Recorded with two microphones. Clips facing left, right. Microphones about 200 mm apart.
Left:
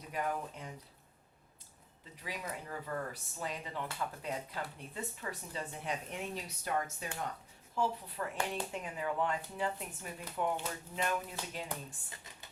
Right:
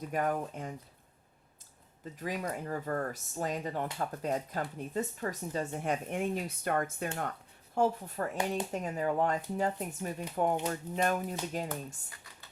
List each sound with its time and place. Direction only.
0.1 s speech: 50° right (ahead or behind)
2.1 s speech: 45° right (ahead or behind)
7.8 s speech: 45° right (ahead or behind)
12.1 s computer keyboard: 20° left (ahead or behind)